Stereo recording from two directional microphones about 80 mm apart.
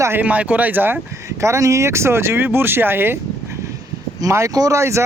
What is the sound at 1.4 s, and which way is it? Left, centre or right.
Speech, right.